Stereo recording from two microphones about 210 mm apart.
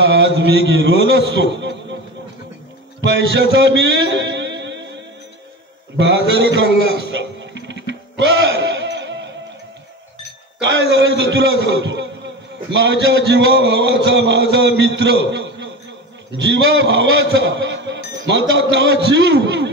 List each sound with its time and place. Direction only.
0.0 s a man's voice: 60° right (ahead or behind)
3.1 s a man's voice: 60° right (ahead or behind)
3.5 s music: 60° right (ahead or behind)
10.6 s a man's voice: 55° right (ahead or behind)